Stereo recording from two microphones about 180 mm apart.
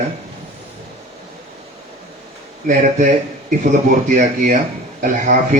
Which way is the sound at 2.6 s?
45° right (ahead or behind).